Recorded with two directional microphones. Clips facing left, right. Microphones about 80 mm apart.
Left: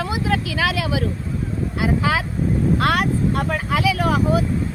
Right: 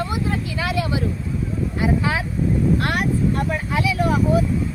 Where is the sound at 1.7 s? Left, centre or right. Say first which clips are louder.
Left 1 dB; left.